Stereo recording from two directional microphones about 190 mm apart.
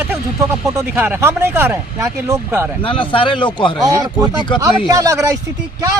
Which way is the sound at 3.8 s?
15° right (ahead or behind).